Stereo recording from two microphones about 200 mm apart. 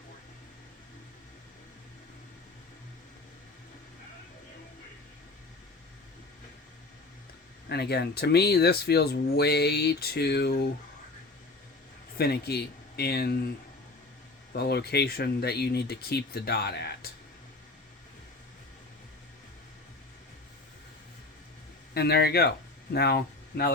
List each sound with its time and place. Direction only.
7.7 s speech: 55° left (ahead or behind)
12.1 s speech: 55° left (ahead or behind)
14.5 s speech: 50° left (ahead or behind)
21.9 s speech: 55° left (ahead or behind)